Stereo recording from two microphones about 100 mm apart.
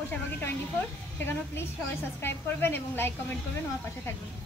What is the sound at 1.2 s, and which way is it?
A woman's voice, 25° left (ahead or behind).